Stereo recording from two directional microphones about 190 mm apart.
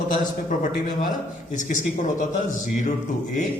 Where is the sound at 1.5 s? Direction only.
40° left (ahead or behind).